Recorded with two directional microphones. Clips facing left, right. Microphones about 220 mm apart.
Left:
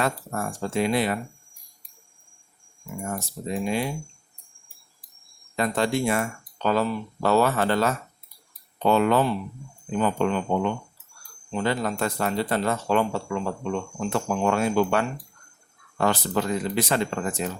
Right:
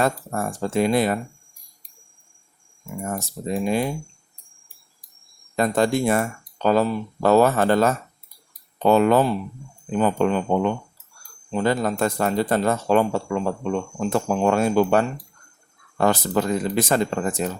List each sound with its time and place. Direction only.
0.0 s speech: 35° right (ahead or behind)
3.5 s speech: 45° right (ahead or behind)
5.5 s speech: 45° right (ahead or behind)